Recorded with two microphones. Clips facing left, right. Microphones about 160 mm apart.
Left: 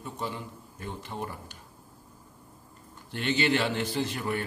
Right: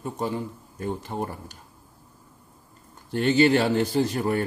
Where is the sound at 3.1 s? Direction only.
40° right (ahead or behind).